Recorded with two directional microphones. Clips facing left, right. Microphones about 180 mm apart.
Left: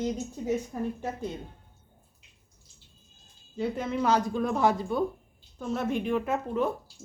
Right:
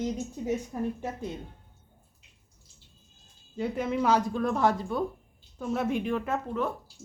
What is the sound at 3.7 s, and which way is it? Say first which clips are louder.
A woman's voice: right 1 dB; 5° right (ahead or behind).